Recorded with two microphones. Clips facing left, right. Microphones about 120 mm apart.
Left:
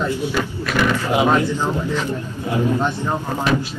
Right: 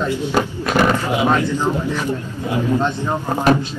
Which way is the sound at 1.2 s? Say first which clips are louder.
Left 3 dB; 25° left (ahead or behind).